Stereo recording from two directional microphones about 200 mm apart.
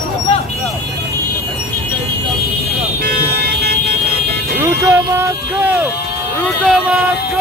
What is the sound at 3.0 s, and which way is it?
Car alarm, 50° right (ahead or behind).